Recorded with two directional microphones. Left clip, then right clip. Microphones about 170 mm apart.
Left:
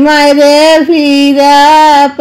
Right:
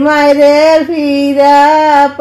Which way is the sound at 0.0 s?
35° left (ahead or behind).